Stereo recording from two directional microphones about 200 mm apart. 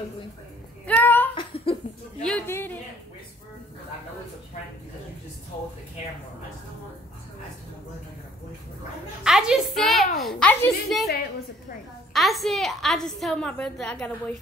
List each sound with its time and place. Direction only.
0.8 s a sound: 10° left (ahead or behind)
1.3 s laughter: 25° left (ahead or behind)
2.2 s a woman's voice: 10° left (ahead or behind)
9.2 s a woman's voice: 5° right (ahead or behind)
12.1 s a woman's voice: centre (ahead or behind)